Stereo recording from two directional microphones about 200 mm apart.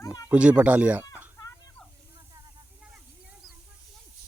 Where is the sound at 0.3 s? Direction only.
5° right (ahead or behind).